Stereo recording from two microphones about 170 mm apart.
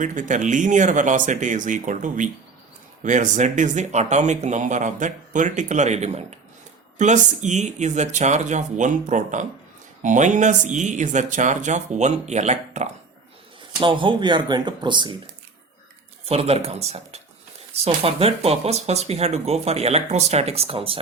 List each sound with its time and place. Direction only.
0.0 s speech: 50° right (ahead or behind)
13.7 s speech: 30° right (ahead or behind)
16.2 s speech: 35° right (ahead or behind)